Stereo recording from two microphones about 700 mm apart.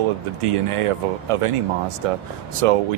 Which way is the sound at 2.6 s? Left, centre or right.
Right.